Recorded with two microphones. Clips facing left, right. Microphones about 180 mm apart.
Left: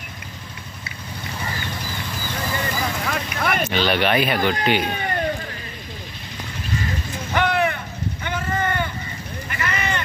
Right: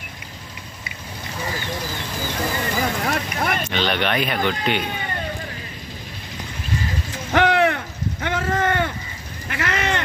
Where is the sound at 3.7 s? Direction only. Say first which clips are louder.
Left 2 dB; 5° left (ahead or behind).